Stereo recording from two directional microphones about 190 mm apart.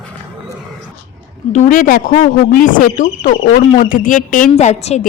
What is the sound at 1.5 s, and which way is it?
Speech, 40° left (ahead or behind).